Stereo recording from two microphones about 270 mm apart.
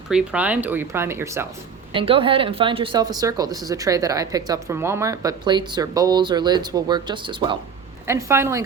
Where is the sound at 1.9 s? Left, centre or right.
Centre.